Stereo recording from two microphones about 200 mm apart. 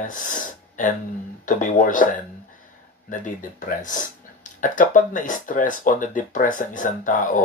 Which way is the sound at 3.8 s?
40° left (ahead or behind).